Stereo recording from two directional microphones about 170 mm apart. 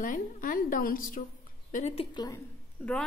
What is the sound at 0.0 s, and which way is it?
A woman's voice, 50° left (ahead or behind).